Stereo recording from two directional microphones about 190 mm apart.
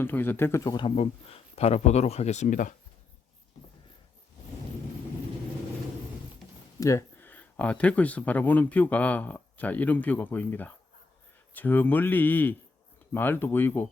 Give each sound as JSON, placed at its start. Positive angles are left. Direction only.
{"t": 0.0, "sound": "speech", "side_deg": 10}
{"t": 6.7, "sound": "speech", "side_deg": 15}